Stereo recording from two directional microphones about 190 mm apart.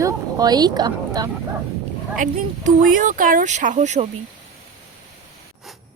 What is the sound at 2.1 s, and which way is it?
Speech, 45° right (ahead or behind).